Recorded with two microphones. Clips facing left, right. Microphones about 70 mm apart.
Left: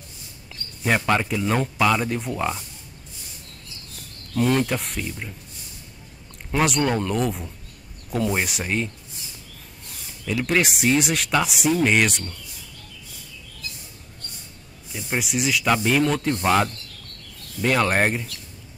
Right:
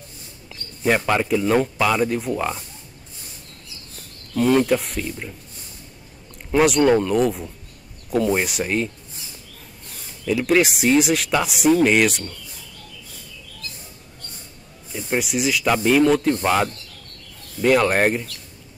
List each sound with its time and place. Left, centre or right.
0.8 s speech: centre
4.4 s speech: centre
6.5 s speech: centre
10.2 s speech: centre
14.9 s speech: centre